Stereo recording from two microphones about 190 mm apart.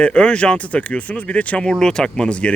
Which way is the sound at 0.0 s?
5° left (ahead or behind).